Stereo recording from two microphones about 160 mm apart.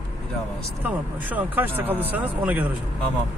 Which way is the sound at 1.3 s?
10° right (ahead or behind).